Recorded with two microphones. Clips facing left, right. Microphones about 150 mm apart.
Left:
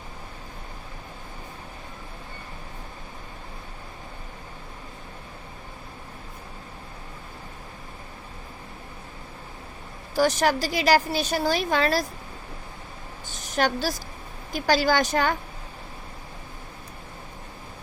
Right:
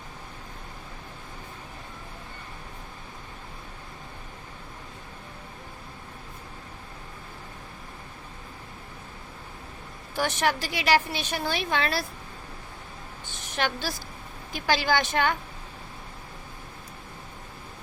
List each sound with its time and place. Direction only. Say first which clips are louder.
10.2 s a woman's voice: left 5 dB; 40° left (ahead or behind)
13.2 s a sound: left 5 dB; 40° left (ahead or behind)
14.5 s a woman's voice: left 3 dB; 40° left (ahead or behind)